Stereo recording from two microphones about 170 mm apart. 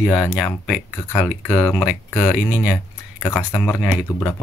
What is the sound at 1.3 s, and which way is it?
Speech, 5° left (ahead or behind).